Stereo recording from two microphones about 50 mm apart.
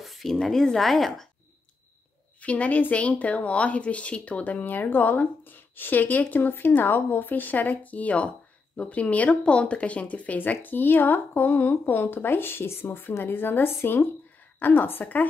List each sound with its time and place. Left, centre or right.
0.0 s a sound: centre
0.4 s speech: centre
2.4 s a woman's voice: left